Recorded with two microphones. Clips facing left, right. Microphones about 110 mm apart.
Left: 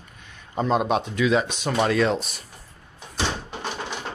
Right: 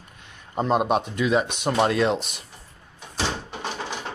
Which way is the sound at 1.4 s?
60° right (ahead or behind).